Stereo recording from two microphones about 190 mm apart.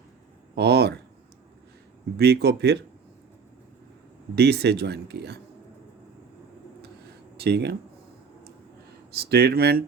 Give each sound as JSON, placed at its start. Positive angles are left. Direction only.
{"t": 0.5, "sound": "a sound", "side_deg": -60}
{"t": 2.1, "sound": "speech", "side_deg": -60}
{"t": 4.4, "sound": "speech", "side_deg": -60}
{"t": 7.3, "sound": "speech", "side_deg": -60}
{"t": 9.1, "sound": "speech", "side_deg": -55}